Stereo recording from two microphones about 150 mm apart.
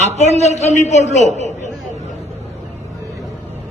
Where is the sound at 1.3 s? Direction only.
50° right (ahead or behind).